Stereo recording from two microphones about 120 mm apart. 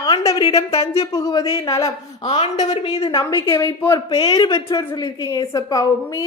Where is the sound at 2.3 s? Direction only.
70° left (ahead or behind).